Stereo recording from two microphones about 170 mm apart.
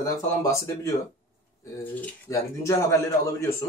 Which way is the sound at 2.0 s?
15° left (ahead or behind).